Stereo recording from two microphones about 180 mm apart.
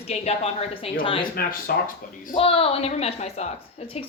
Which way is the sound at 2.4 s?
30° left (ahead or behind).